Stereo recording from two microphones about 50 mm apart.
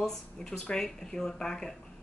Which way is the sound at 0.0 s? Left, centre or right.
Centre.